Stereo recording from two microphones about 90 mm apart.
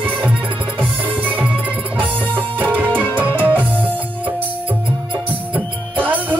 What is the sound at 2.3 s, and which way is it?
Music, 20° right (ahead or behind).